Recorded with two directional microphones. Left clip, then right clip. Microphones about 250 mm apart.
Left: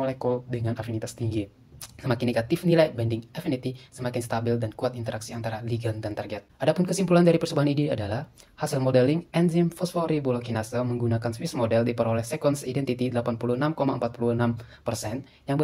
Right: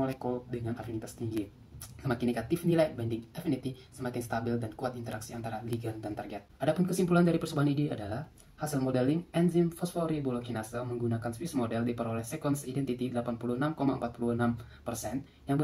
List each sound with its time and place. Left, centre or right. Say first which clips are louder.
0.2 s speech: left 8 dB; left